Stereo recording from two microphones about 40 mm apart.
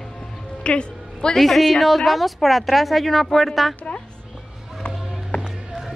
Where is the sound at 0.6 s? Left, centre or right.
Left.